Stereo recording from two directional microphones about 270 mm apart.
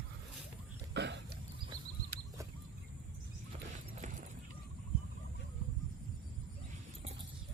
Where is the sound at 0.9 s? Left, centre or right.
Right.